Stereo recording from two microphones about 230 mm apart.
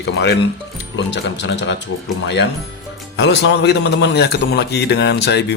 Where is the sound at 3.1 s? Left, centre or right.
Left.